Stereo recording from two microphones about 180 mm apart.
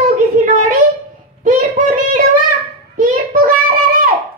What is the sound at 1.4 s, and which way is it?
Child singing, 45° right (ahead or behind).